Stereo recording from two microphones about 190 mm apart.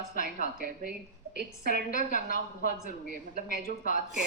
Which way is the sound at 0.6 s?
50° right (ahead or behind).